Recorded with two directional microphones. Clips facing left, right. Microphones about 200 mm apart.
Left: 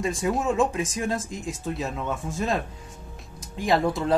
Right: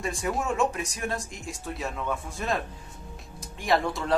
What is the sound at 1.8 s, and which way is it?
Speech, 20° left (ahead or behind).